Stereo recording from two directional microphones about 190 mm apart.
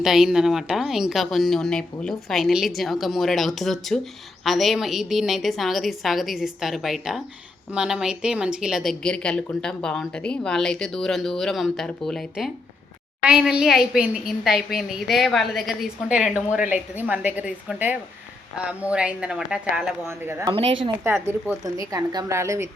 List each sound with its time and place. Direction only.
0.0 s a woman's voice: centre (ahead or behind)